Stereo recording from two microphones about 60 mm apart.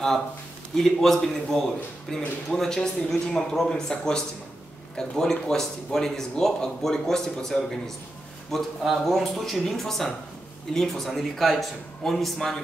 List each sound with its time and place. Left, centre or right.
0.7 s a man's voice: centre